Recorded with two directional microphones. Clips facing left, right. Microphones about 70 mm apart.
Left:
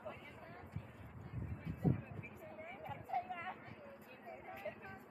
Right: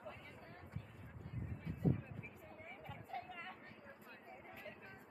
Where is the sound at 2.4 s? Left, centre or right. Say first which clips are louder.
Left 4 dB; centre.